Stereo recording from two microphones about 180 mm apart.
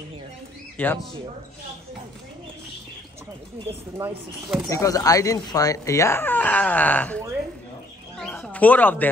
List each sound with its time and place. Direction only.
0.8 s speech: 10° left (ahead or behind)
4.0 s speech: 10° right (ahead or behind)
4.6 s speech: 20° left (ahead or behind)
8.2 s a sound: 5° left (ahead or behind)